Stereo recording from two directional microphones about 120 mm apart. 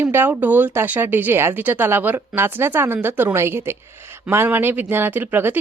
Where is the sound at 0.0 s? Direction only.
20° right (ahead or behind).